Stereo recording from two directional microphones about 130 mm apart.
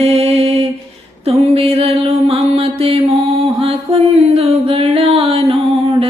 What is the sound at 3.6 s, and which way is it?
Music, 45° right (ahead or behind).